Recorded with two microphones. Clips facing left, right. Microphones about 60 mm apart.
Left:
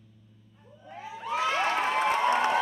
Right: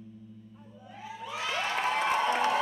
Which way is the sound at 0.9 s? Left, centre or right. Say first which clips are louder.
Left 6 dB; left.